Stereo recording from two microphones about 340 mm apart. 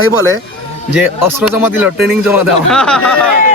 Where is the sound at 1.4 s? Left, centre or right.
Centre.